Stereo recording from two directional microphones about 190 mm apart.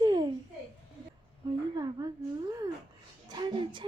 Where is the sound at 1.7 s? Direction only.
20° right (ahead or behind).